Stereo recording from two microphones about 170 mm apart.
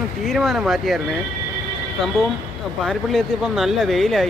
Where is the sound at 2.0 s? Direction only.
Centre (ahead or behind).